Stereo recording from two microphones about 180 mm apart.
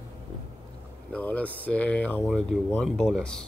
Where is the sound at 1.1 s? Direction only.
10° left (ahead or behind).